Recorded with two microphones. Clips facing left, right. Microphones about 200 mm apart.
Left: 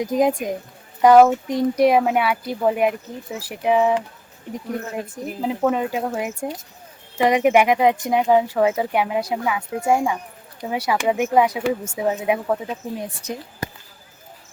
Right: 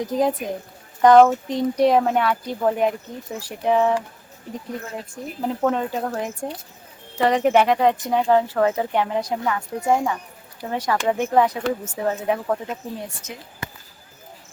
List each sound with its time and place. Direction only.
0.0 s speech: 15° left (ahead or behind)
5.1 s speech: 5° left (ahead or behind)
13.2 s speech: 35° left (ahead or behind)